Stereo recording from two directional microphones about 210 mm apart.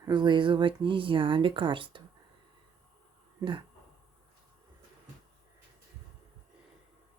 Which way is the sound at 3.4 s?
25° right (ahead or behind).